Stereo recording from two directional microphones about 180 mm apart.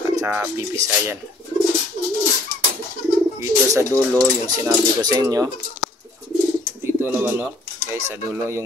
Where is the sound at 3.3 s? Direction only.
15° right (ahead or behind).